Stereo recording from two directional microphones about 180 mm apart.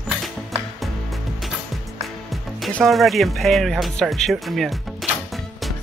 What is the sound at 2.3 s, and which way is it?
Speech, 5° left (ahead or behind).